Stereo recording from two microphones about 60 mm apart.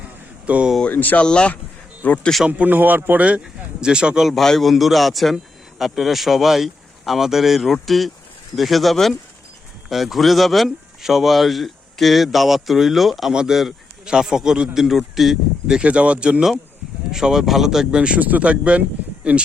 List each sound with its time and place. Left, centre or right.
0.4 s speech: right
0.9 s speech: left
1.2 s speech: centre
2.5 s a man's voice: right; by 13.3 s centre
13.3 s a man's voice: centre
17.1 s a man's voice: centre